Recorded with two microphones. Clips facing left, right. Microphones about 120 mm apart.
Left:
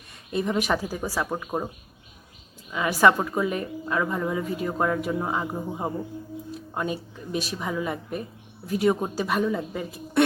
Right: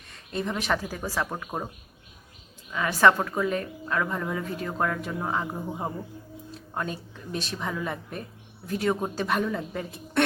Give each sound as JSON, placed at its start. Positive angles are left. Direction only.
{"t": 0.3, "sound": "a woman's voice", "side_deg": 15}
{"t": 2.7, "sound": "a woman's voice", "side_deg": 10}